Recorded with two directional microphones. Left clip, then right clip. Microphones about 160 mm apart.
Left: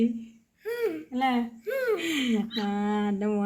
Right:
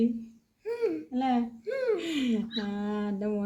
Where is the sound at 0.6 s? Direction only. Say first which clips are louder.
Left 1 dB; 10° right (ahead or behind).